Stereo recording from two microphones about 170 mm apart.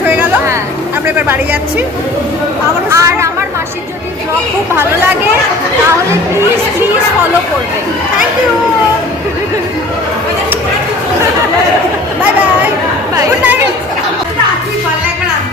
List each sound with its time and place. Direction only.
0.1 s a sound: 10° right (ahead or behind)
2.9 s chatter: 15° right (ahead or behind)
4.7 s speech: 15° right (ahead or behind)
13.1 s chatter: 10° right (ahead or behind)